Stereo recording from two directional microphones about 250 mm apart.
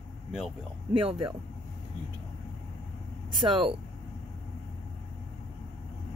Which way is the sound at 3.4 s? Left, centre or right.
Centre.